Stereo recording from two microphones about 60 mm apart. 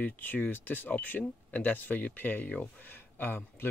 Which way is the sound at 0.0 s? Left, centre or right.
Left.